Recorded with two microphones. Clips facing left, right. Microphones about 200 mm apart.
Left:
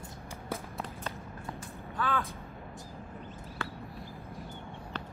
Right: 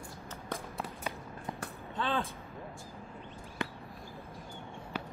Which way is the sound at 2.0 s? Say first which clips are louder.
Left 1 dB; 30° right (ahead or behind).